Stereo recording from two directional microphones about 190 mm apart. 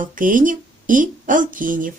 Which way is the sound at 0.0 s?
45° right (ahead or behind).